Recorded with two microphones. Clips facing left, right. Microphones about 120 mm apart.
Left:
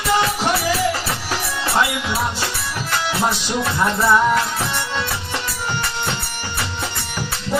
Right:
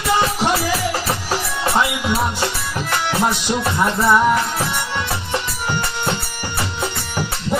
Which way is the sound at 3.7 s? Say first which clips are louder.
Even; 15° right (ahead or behind).